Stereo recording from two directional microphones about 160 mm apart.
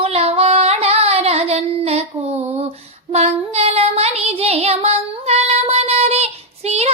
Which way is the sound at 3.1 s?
40° right (ahead or behind).